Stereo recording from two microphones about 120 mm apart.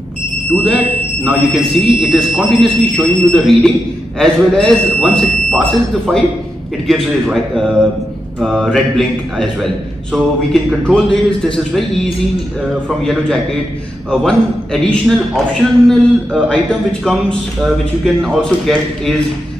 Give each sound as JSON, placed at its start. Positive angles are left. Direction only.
{"t": 0.5, "sound": "a man's voice", "side_deg": 5}
{"t": 13.0, "sound": "a man's voice", "side_deg": 5}